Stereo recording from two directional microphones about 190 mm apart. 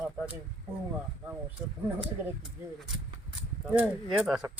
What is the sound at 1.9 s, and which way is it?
Speech, 5° right (ahead or behind).